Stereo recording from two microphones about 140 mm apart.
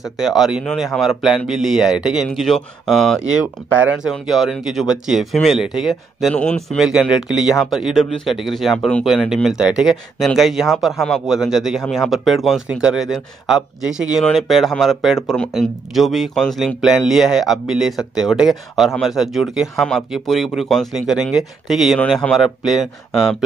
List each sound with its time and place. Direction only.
0.2 s speech: 5° right (ahead or behind)
6.9 s speech: 5° right (ahead or behind)